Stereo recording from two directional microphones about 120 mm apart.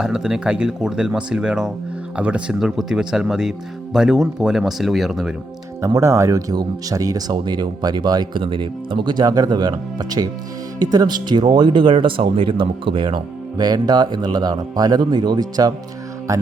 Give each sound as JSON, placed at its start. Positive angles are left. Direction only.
{"t": 0.0, "sound": "speech", "side_deg": -5}
{"t": 5.8, "sound": "speech", "side_deg": -25}